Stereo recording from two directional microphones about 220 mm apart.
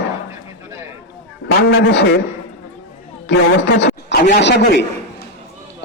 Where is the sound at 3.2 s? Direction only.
50° left (ahead or behind).